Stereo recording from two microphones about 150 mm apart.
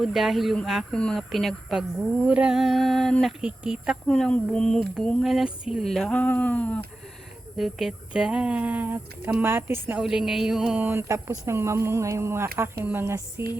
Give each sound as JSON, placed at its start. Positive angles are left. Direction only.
{"t": 0.0, "sound": "speech", "side_deg": 0}
{"t": 4.1, "sound": "speech", "side_deg": 5}
{"t": 5.0, "sound": "a sound", "side_deg": 0}
{"t": 7.5, "sound": "speech", "side_deg": 0}
{"t": 10.0, "sound": "speech", "side_deg": -5}